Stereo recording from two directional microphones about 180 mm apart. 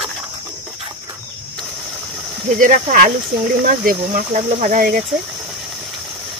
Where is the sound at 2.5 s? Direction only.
50° right (ahead or behind).